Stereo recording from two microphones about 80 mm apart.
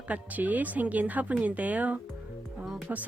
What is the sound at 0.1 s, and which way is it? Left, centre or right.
Speech, centre.